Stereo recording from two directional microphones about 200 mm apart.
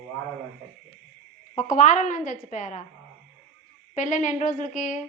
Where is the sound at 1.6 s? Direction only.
40° left (ahead or behind).